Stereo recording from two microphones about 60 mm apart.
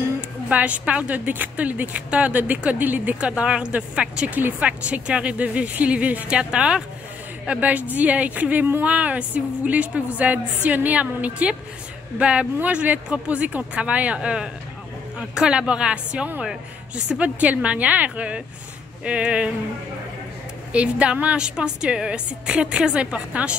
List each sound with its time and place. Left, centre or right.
0.5 s a woman's voice: right
4.4 s speech: right
4.6 s a woman's voice: centre
20.7 s a woman's voice: centre